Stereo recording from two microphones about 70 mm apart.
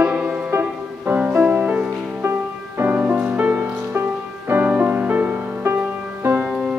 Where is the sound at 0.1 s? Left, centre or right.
Centre.